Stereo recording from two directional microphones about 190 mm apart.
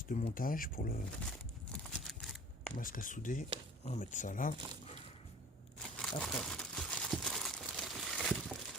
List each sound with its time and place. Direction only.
0.1 s speech: 40° left (ahead or behind)
1.7 s a sound: centre (ahead or behind)
2.7 s speech: 45° left (ahead or behind)
4.5 s speech: 25° right (ahead or behind)
5.8 s crumpling: 5° left (ahead or behind)